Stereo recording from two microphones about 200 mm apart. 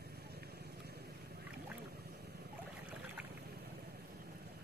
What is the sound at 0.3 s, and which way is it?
Boat, 50° right (ahead or behind).